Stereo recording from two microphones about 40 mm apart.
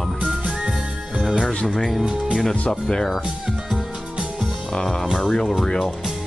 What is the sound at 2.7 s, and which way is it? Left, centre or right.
Speech, centre.